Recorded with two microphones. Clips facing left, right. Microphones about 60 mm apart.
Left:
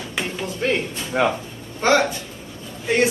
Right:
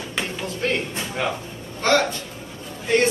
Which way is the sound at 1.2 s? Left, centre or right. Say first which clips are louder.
Left 6 dB; left.